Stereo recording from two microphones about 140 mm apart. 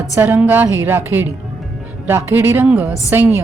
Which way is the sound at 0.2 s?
10° right (ahead or behind).